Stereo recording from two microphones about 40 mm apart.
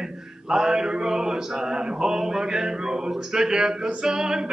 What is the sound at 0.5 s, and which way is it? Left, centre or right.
Male singing, centre.